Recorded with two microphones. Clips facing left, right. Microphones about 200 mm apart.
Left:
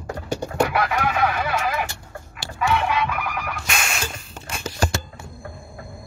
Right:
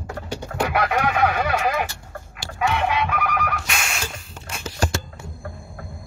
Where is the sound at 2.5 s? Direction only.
50° right (ahead or behind).